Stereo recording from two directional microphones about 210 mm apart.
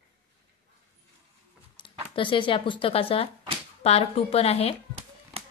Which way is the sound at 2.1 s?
25° left (ahead or behind).